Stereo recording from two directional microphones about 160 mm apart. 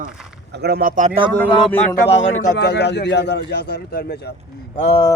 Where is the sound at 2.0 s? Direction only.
90° left.